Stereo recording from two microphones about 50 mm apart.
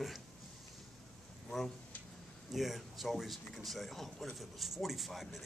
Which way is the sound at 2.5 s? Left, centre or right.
Centre.